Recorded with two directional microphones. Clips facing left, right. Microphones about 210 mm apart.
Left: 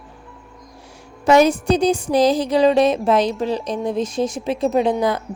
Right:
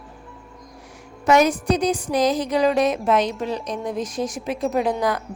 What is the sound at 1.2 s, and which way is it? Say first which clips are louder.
A woman's voice: left 3 dB; 30° left (ahead or behind).